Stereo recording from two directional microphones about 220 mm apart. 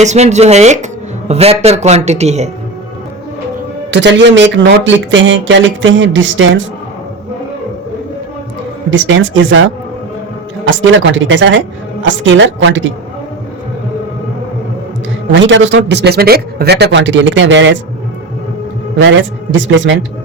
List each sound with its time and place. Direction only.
0.0 s speech: 30° right (ahead or behind)
3.9 s speech: 55° right (ahead or behind)
8.9 s speech: 60° right (ahead or behind)
10.7 s speech: 55° right (ahead or behind)
15.4 s speech: 55° right (ahead or behind)
19.0 s speech: 60° right (ahead or behind)